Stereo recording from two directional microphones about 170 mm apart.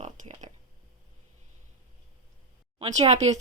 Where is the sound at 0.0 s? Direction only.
45° right (ahead or behind).